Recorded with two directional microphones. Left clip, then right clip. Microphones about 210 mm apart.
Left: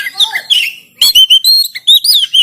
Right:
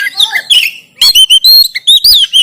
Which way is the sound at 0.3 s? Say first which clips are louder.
Right 5 dB; 40° right (ahead or behind).